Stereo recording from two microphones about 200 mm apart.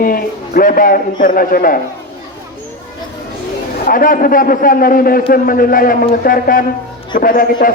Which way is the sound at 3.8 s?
45° left (ahead or behind).